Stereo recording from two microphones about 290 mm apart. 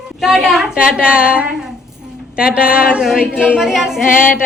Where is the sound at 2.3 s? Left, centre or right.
Centre.